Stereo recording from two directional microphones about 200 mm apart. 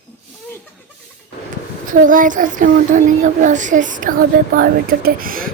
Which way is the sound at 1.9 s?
40° right (ahead or behind).